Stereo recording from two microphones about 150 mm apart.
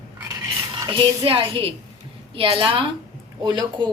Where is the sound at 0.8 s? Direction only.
35° right (ahead or behind).